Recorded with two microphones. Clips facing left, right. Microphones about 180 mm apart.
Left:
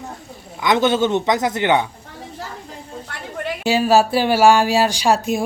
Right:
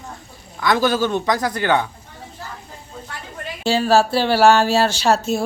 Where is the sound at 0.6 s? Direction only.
20° left (ahead or behind).